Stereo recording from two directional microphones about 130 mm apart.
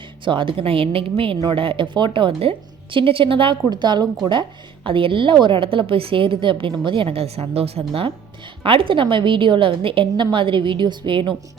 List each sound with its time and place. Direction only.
0.3 s a woman's voice: 40° right (ahead or behind)